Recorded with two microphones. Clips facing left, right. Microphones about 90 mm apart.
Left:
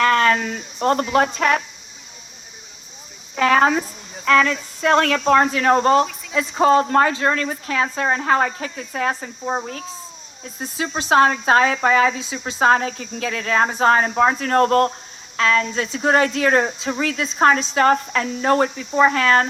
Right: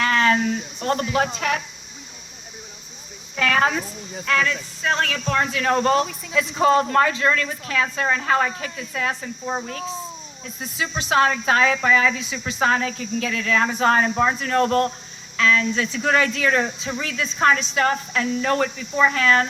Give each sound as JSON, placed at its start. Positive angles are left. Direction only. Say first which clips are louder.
{"t": 0.0, "sound": "speech", "louder": "left 2 dB", "side_deg": 45}
{"t": 3.3, "sound": "speech", "louder": "left 4 dB", "side_deg": 35}
{"t": 4.8, "sound": "a woman's voice", "louder": "left 7 dB", "side_deg": 60}
{"t": 5.2, "sound": "speech", "louder": "left 6 dB", "side_deg": 40}
{"t": 10.4, "sound": "speech", "louder": "left 2 dB", "side_deg": 35}
{"t": 12.2, "sound": "speech", "louder": "left 4 dB", "side_deg": 25}